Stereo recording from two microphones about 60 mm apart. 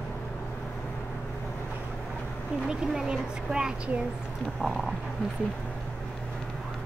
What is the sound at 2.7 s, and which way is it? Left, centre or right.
Speech, centre.